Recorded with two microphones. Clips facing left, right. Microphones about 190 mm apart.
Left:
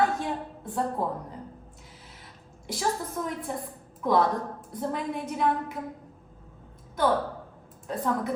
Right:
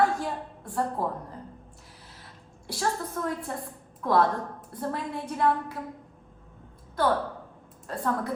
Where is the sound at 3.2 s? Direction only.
20° left (ahead or behind).